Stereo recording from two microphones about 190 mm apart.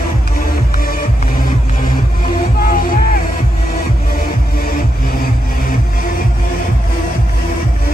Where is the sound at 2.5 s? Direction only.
50° left (ahead or behind).